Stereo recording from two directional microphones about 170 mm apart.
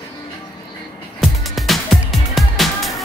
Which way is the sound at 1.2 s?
Centre (ahead or behind).